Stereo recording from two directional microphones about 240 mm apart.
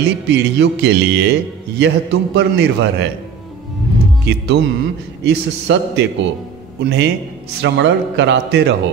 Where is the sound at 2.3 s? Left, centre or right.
Right.